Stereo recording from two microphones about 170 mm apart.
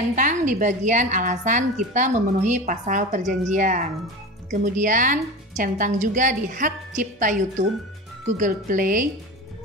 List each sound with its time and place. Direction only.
0.1 s a woman's voice: 50° right (ahead or behind)